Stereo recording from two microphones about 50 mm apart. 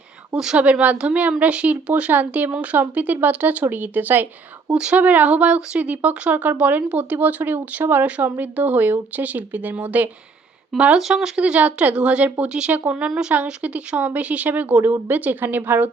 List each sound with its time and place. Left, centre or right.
0.5 s speech: right
4.7 s speech: centre
4.9 s speech: right
10.7 s speech: centre
11.1 s speech: centre
13.1 s a woman's voice: centre
13.3 s speech: right